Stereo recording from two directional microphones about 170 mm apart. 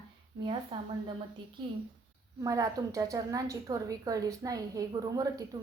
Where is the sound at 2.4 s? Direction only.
20° right (ahead or behind).